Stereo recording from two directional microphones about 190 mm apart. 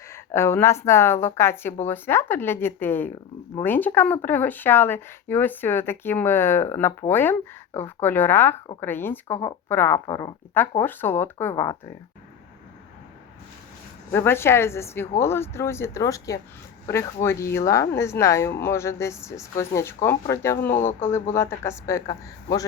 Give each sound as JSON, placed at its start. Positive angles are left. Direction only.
{"t": 0.3, "sound": "a woman's voice", "side_deg": 15}
{"t": 14.1, "sound": "a woman's voice", "side_deg": 10}